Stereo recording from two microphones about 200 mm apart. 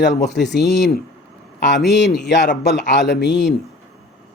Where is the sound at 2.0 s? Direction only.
60° left (ahead or behind).